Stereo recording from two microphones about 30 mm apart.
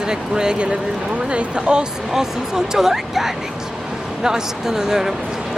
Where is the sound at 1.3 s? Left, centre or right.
Right.